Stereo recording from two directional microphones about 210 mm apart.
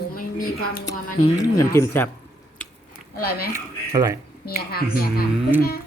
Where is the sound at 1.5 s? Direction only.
15° left (ahead or behind).